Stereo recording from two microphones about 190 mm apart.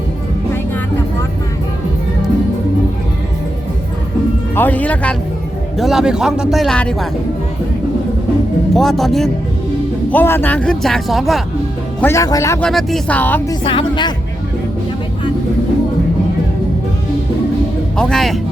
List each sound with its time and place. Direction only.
4.5 s speech: 10° left (ahead or behind)
8.7 s speech: centre (ahead or behind)
11.9 s speech: 15° left (ahead or behind)
12.6 s speech: 5° left (ahead or behind)
13.7 s speech: 25° left (ahead or behind)
17.9 s speech: 5° left (ahead or behind)